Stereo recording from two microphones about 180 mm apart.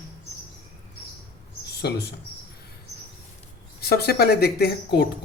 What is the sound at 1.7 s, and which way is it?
Mouse, 65° left (ahead or behind).